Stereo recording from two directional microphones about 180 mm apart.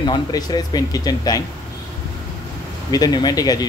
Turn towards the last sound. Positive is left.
turn(degrees=20)  # may be behind; listen again after turning